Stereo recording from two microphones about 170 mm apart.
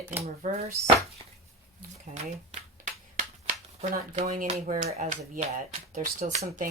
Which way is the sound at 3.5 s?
45° right (ahead or behind).